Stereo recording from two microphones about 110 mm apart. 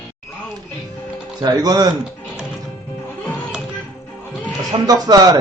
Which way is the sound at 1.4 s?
35° right (ahead or behind).